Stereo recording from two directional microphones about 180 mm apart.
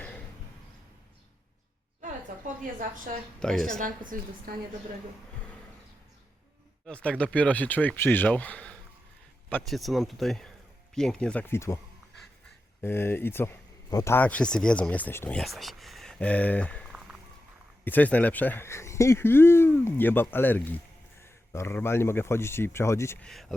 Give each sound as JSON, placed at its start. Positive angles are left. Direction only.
{"t": 2.7, "sound": "a woman's voice", "side_deg": -50}
{"t": 3.4, "sound": "speech", "side_deg": 0}
{"t": 4.1, "sound": "a woman's voice", "side_deg": -50}
{"t": 6.8, "sound": "speech", "side_deg": 5}
{"t": 12.8, "sound": "speech", "side_deg": 10}
{"t": 23.3, "sound": "speech", "side_deg": 0}